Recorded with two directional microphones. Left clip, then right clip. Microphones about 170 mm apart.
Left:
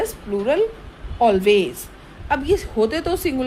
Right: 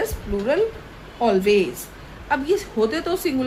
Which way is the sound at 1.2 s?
50° left (ahead or behind).